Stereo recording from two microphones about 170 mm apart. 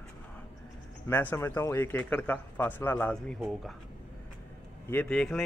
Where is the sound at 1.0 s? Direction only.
15° left (ahead or behind).